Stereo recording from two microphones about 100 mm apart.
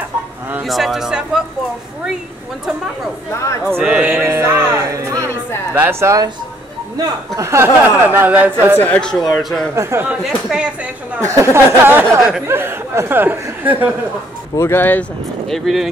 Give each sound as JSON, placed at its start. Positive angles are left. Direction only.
{"t": 0.7, "sound": "speech", "side_deg": 0}
{"t": 3.8, "sound": "speech", "side_deg": -10}
{"t": 7.3, "sound": "speech", "side_deg": -25}
{"t": 8.7, "sound": "speech", "side_deg": 15}
{"t": 9.8, "sound": "speech", "side_deg": -30}
{"t": 10.2, "sound": "speech", "side_deg": -5}
{"t": 11.1, "sound": "speech", "side_deg": -30}
{"t": 12.2, "sound": "speech", "side_deg": -5}
{"t": 12.4, "sound": "speech", "side_deg": -25}
{"t": 14.6, "sound": "speech", "side_deg": 20}
{"t": 15.5, "sound": "speech", "side_deg": 0}